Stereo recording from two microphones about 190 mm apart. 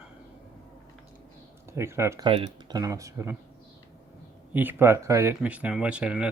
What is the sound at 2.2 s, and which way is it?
Speech, 30° right (ahead or behind).